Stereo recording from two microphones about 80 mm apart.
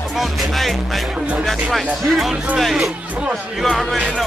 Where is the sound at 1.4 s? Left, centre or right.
Centre.